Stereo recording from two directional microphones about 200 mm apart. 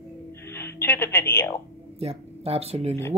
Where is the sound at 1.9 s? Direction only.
30° right (ahead or behind).